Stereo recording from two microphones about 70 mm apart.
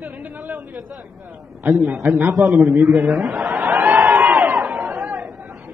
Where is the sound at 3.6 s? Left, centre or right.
Right.